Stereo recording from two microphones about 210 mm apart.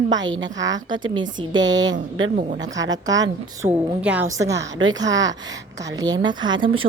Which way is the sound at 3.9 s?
5° right (ahead or behind).